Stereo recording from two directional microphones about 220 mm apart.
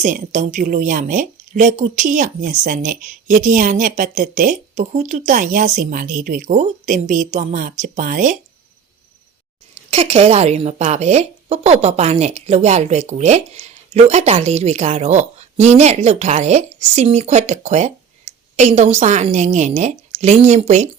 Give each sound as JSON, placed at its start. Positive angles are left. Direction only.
{"t": 0.0, "sound": "a woman's voice", "side_deg": -35}
{"t": 9.9, "sound": "a woman's voice", "side_deg": -25}